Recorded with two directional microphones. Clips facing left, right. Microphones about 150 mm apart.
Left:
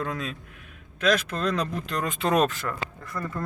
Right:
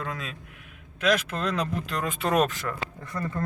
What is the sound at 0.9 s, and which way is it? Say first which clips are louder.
Speech: left 1 dB; 10° right (ahead or behind).